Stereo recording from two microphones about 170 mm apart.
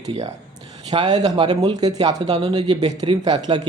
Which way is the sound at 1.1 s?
40° right (ahead or behind).